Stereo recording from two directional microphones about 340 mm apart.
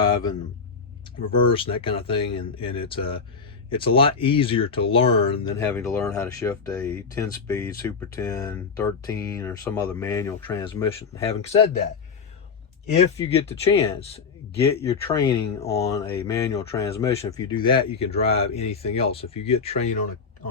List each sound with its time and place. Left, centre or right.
0.0 s a sound: centre
1.2 s speech: centre
13.1 s speech: centre